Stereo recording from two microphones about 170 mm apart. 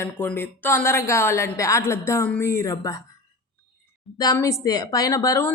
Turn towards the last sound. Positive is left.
turn(degrees=20)  # may be behind; listen again after turning